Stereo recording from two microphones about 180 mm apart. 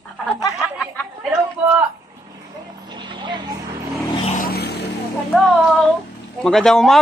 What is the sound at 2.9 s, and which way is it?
Vehicle, 25° right (ahead or behind).